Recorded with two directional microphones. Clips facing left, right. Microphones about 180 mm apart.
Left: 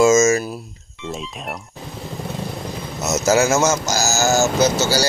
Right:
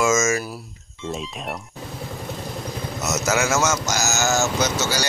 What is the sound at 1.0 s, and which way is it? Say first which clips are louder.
Speech: even; centre (ahead or behind).